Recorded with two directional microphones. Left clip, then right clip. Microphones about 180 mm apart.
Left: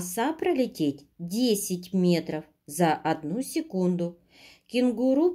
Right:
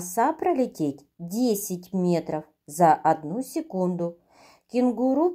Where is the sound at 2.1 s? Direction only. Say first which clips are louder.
Right 3 dB; 5° left (ahead or behind).